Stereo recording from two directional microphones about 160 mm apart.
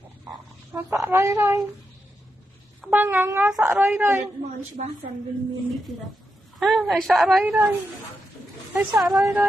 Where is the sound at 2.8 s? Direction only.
10° right (ahead or behind).